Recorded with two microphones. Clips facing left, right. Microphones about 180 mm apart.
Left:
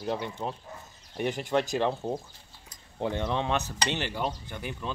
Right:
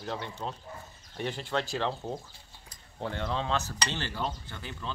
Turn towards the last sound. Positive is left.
turn(degrees=15)  # may be behind; listen again after turning